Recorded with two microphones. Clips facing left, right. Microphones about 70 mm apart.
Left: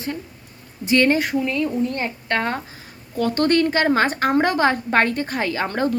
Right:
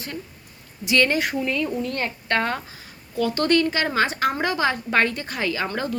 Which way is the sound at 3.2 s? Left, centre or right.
Left.